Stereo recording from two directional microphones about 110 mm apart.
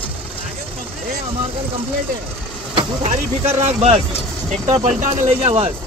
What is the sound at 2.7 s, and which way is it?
Speech, 70° right (ahead or behind).